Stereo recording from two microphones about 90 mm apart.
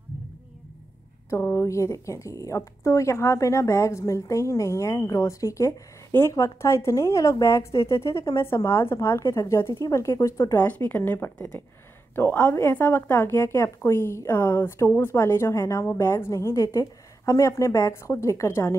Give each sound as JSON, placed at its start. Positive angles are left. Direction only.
{"t": 1.4, "sound": "speech", "side_deg": 30}